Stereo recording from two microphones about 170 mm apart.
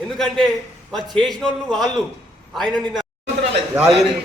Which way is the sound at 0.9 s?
Centre (ahead or behind).